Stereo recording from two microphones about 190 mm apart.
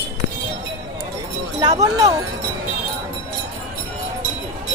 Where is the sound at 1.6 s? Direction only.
20° right (ahead or behind).